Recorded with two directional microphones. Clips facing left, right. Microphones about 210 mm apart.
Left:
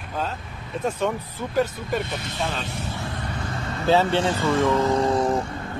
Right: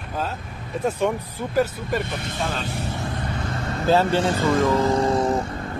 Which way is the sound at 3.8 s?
5° right (ahead or behind).